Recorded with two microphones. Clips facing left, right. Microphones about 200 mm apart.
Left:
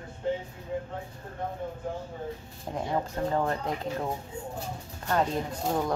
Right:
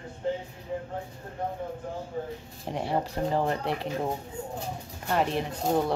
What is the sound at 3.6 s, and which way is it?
Speech, 75° right (ahead or behind).